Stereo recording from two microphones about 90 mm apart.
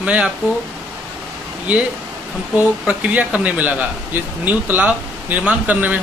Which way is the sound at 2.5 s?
20° right (ahead or behind).